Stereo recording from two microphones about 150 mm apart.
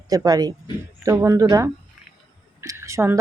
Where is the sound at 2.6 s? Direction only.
20° right (ahead or behind).